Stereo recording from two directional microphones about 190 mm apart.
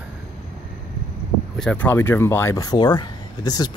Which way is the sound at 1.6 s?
10° left (ahead or behind).